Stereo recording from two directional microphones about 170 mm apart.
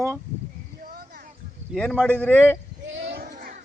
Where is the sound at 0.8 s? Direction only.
65° right (ahead or behind).